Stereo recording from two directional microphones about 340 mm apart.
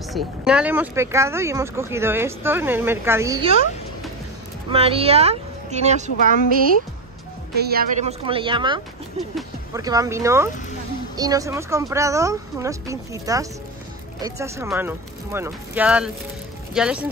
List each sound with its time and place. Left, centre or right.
0.1 s speech: centre
4.6 s speech: centre
7.5 s speech: right; by 17.1 s centre